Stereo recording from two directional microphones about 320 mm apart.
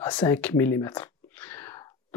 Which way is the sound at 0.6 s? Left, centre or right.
Centre.